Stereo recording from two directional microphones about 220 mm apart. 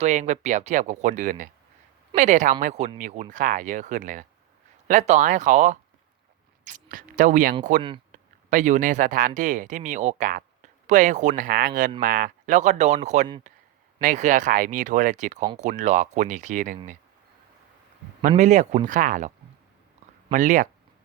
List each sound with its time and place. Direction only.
0.0 s speech: 30° right (ahead or behind)
7.8 s speech: 20° right (ahead or behind)
8.1 s speech: 35° right (ahead or behind)
13.5 s a sound: 35° right (ahead or behind)
14.0 s speech: 35° right (ahead or behind)
18.2 s speech: 35° right (ahead or behind)
20.3 s speech: 35° right (ahead or behind)